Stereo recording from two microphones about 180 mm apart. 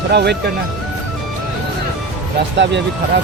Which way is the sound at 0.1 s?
65° right (ahead or behind).